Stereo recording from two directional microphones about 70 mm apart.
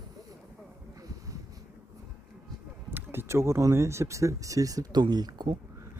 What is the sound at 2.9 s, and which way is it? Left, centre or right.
Speech, right.